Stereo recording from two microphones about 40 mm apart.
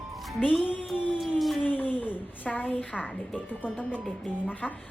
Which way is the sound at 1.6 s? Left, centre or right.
Left.